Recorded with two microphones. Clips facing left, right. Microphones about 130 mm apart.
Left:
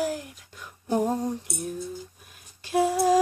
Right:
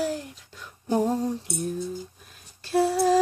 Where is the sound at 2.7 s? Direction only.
15° left (ahead or behind).